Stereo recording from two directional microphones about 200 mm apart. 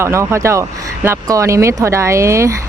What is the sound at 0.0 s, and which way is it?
Speech, 15° right (ahead or behind).